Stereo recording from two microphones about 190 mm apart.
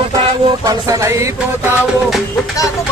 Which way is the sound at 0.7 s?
20° right (ahead or behind).